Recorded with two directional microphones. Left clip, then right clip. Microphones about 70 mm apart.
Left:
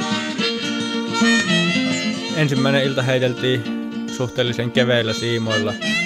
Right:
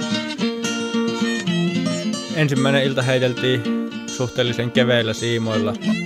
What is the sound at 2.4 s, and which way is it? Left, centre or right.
Speech, centre.